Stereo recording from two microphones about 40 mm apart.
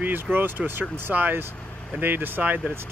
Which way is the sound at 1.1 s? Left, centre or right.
Right.